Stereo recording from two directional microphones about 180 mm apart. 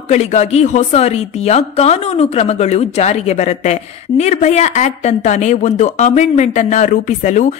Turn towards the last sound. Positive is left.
turn(degrees=45)  # may be behind; listen again after turning